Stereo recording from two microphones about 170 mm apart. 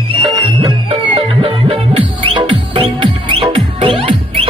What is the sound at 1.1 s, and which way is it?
Music, 35° right (ahead or behind).